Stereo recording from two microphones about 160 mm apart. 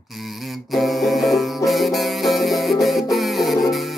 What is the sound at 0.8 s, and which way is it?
Music, centre (ahead or behind).